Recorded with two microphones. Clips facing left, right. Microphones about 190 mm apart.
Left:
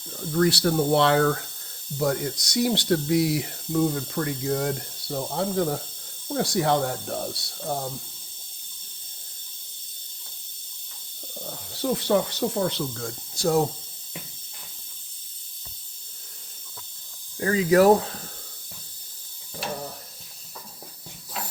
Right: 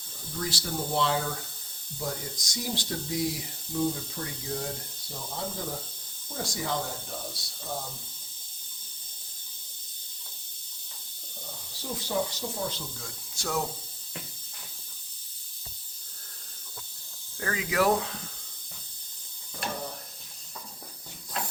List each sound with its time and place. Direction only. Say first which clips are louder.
0.2 s speech: left 13 dB; 65° left (ahead or behind)
11.4 s speech: left 12 dB; 65° left (ahead or behind)
13.3 s speech: left 9 dB; 35° left (ahead or behind)
17.4 s speech: left 9 dB; 30° left (ahead or behind)
21.4 s ratchet: even; 5° left (ahead or behind)